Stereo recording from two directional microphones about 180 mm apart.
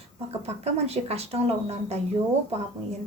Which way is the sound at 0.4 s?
35° right (ahead or behind).